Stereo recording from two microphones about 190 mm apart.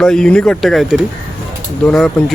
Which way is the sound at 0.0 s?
5° left (ahead or behind).